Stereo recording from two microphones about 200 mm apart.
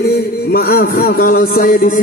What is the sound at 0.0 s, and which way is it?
Music, 50° left (ahead or behind).